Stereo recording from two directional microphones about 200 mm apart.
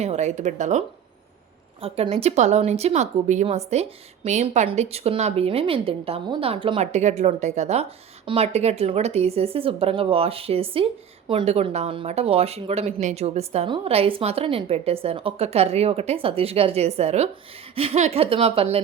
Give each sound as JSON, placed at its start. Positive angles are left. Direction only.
{"t": 0.0, "sound": "a woman's voice", "side_deg": -35}